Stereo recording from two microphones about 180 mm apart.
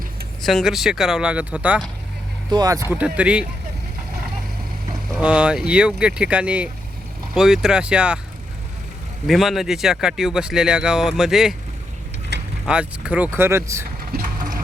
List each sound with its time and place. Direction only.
0.4 s speech: centre (ahead or behind)
2.5 s speech: 20° right (ahead or behind)
2.9 s speech: 5° right (ahead or behind)
5.1 s speech: 5° right (ahead or behind)
9.2 s speech: centre (ahead or behind)
12.3 s vehicle: 70° right (ahead or behind)
12.6 s speech: 5° right (ahead or behind)
14.1 s a sound: 50° right (ahead or behind)